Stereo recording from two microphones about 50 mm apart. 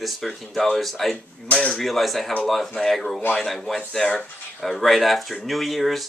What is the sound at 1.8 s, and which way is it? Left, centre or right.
Speech, centre.